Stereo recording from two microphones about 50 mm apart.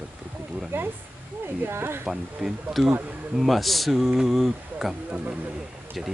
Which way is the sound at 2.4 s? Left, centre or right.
Centre.